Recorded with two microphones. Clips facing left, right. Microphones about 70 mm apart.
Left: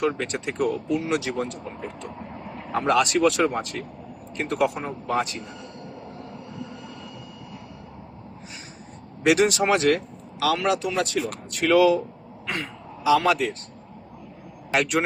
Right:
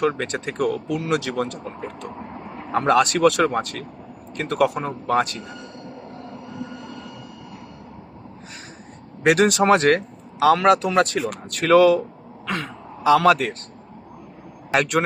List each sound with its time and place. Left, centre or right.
0.0 s speech: right
2.7 s speech: right
9.2 s speech: right
12.5 s throat clearing: right
13.1 s speech: right
14.7 s speech: right